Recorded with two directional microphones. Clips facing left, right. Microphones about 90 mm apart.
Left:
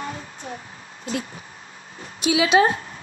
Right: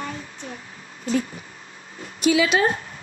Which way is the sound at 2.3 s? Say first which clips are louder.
Left 2 dB; 20° left (ahead or behind).